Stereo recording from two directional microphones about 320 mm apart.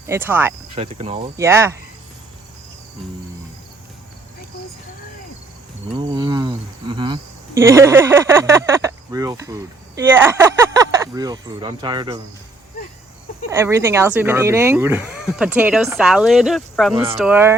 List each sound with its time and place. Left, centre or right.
0.1 s speech: centre
0.8 s speech: centre
6.0 s speech: centre
13.5 s speech: centre
16.9 s speech: centre
17.2 s speech: centre